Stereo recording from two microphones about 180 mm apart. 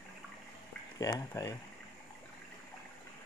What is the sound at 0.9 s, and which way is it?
Speech, 20° left (ahead or behind).